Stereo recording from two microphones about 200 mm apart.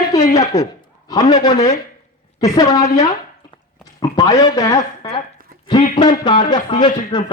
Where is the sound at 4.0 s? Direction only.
20° left (ahead or behind).